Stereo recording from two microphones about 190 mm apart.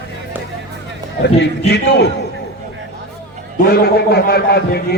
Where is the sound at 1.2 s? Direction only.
65° left (ahead or behind).